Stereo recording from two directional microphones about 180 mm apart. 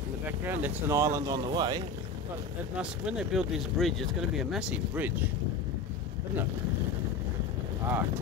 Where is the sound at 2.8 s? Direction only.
5° right (ahead or behind).